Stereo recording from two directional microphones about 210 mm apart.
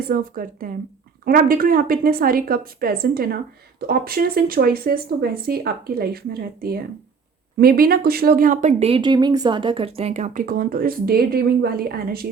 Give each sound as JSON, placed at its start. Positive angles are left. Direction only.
{"t": 0.1, "sound": "speech", "side_deg": -40}